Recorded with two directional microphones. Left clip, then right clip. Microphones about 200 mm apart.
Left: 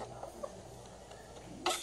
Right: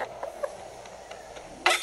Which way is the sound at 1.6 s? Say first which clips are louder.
Right 12 dB; 15° right (ahead or behind).